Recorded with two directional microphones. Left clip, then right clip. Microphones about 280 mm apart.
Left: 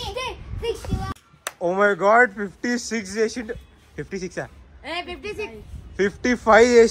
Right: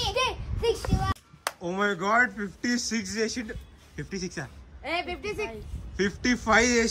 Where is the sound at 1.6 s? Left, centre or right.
Centre.